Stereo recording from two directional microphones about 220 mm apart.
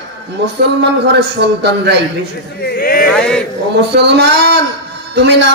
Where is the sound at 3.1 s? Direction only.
5° left (ahead or behind).